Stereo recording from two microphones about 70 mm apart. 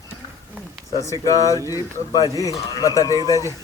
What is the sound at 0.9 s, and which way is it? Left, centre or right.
Speech, left.